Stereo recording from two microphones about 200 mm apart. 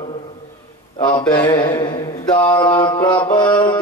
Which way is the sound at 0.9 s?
25° left (ahead or behind).